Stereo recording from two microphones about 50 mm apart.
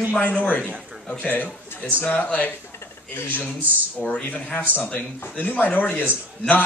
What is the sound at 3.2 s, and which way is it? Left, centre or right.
Speech, left.